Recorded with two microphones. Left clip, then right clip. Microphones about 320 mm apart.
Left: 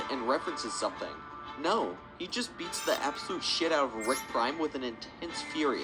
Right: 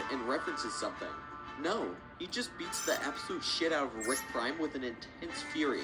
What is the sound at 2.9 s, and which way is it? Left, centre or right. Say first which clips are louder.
Speech: left 4 dB; centre.